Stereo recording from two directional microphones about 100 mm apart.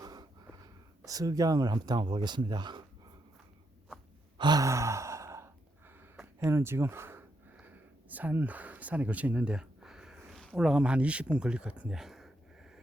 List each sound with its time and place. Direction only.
0.0 s speech: 40° right (ahead or behind)
4.4 s sigh: 45° right (ahead or behind)
4.6 s sigh: 30° right (ahead or behind)
6.4 s speech: 25° right (ahead or behind); by 12.8 s 5° right (ahead or behind)